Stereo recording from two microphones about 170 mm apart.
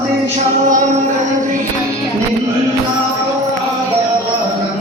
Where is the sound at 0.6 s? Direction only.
50° right (ahead or behind).